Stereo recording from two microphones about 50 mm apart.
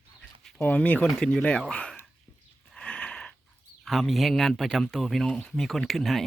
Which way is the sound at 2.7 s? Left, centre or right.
Centre.